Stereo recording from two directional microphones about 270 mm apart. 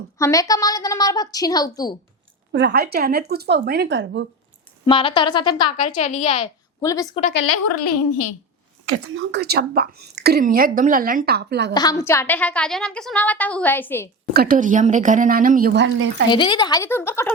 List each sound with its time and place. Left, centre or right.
0.2 s a woman's voice: centre
2.5 s a woman's voice: right
4.9 s a woman's voice: centre
6.8 s a woman's voice: centre
7.3 s a woman's voice: left
8.9 s a woman's voice: right
11.7 s a woman's voice: centre
14.3 s a woman's voice: right
16.3 s a woman's voice: centre